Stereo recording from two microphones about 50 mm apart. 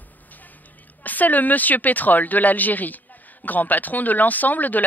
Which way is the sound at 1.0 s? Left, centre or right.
Left.